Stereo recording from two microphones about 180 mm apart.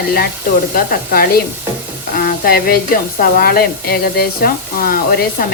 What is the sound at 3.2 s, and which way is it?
Speech, 55° left (ahead or behind).